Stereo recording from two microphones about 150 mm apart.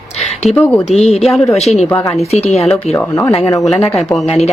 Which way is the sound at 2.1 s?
45° left (ahead or behind).